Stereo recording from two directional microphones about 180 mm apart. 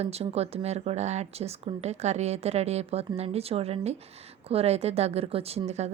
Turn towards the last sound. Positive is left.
turn(degrees=-35)  # may be behind; listen again after turning